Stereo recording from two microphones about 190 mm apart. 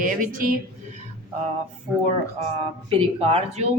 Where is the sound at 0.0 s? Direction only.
45° right (ahead or behind).